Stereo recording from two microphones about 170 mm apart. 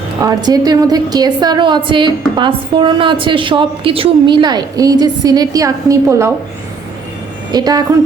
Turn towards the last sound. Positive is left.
turn(degrees=-20)  # may be behind; listen again after turning